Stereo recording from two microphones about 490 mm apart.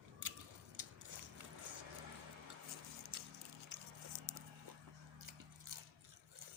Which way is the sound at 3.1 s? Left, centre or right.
Right.